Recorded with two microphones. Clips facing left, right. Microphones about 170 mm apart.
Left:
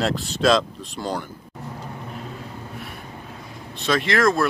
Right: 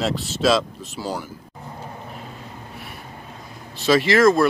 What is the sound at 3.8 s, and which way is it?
Speech, 5° right (ahead or behind).